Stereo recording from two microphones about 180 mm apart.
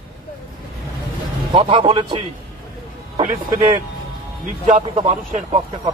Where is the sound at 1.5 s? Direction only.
30° right (ahead or behind).